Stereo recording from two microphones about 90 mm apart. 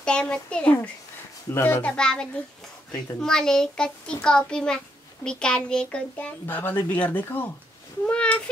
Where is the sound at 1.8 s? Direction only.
10° left (ahead or behind).